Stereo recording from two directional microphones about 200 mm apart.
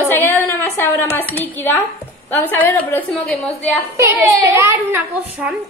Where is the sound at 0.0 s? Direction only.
10° left (ahead or behind).